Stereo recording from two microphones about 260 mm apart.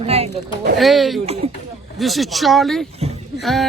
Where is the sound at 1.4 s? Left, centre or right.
Right.